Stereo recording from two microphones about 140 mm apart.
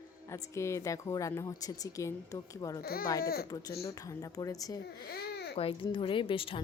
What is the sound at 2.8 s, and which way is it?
Speech, 90° left.